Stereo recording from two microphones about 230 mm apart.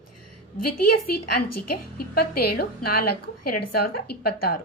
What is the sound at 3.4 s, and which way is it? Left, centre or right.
Speech, left.